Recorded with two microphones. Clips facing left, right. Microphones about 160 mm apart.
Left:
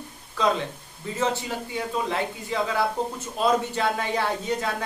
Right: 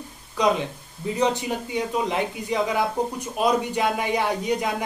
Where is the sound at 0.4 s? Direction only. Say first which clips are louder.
Right 2 dB; 15° right (ahead or behind).